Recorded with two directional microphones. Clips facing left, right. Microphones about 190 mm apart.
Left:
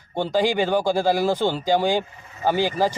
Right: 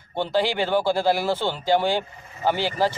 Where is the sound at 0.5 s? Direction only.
10° left (ahead or behind).